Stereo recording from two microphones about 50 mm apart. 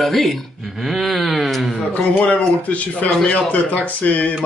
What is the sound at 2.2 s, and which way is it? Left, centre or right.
Speech, left.